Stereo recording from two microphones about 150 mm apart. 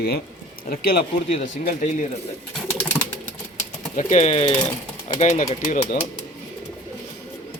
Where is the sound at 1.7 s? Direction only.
55° left (ahead or behind).